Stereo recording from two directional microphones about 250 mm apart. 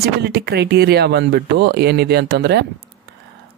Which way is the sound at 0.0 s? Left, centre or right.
Right.